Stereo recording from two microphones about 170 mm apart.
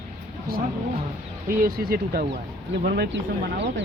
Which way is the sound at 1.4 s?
60° right (ahead or behind).